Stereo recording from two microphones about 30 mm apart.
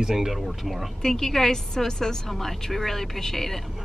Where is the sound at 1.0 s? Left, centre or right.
Centre.